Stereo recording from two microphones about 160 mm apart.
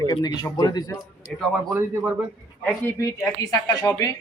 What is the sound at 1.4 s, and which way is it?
Speech, centre (ahead or behind).